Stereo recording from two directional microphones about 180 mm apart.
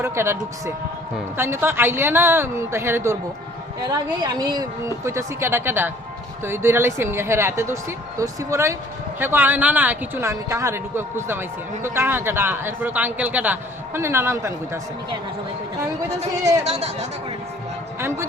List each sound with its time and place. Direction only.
0.0 s speech: 15° right (ahead or behind)
16.6 s speech: 35° right (ahead or behind)